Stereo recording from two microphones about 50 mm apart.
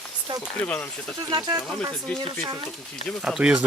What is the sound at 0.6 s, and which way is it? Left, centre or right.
Speech, left.